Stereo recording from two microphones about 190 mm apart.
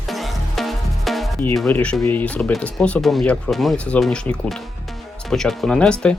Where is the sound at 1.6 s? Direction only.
5° left (ahead or behind).